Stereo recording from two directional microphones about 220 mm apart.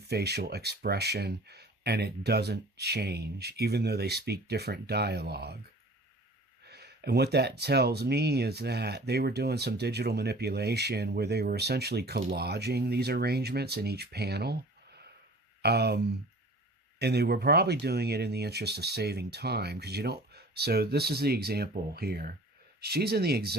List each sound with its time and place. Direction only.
0.1 s speech: 50° right (ahead or behind)
6.7 s speech: 45° right (ahead or behind)